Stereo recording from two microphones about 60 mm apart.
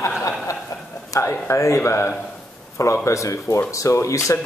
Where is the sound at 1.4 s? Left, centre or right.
Left.